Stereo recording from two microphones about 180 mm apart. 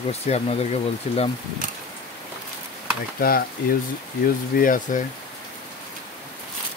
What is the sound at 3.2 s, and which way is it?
Speech, 55° left (ahead or behind).